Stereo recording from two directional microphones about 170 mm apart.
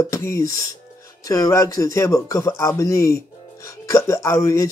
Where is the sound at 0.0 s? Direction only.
20° left (ahead or behind).